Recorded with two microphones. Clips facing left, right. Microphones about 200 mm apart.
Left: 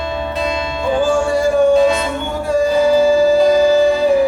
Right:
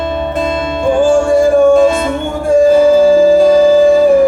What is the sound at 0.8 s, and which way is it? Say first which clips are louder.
Music: right 6 dB; 50° right (ahead or behind).